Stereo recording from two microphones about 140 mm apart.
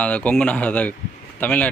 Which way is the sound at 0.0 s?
10° left (ahead or behind).